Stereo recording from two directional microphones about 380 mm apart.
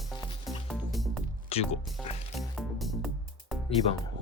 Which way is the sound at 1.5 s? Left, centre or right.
Centre.